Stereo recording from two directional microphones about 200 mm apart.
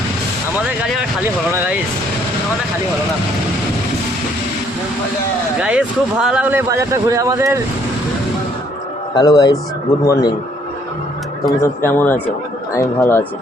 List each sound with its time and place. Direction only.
5.5 s speech: 5° right (ahead or behind)
9.1 s speech: 20° left (ahead or behind)
11.6 s speech: 10° left (ahead or behind)